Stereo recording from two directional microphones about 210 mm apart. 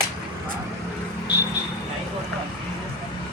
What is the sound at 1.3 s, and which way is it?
Vehicle, 50° left (ahead or behind).